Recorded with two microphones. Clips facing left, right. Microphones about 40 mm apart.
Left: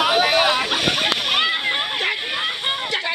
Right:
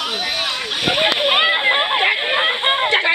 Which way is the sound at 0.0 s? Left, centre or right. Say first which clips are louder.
Left 6 dB; left.